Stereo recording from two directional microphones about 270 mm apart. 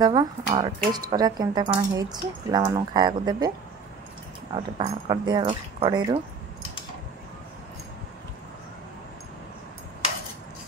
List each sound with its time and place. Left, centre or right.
0.0 s speech: centre
4.6 s speech: right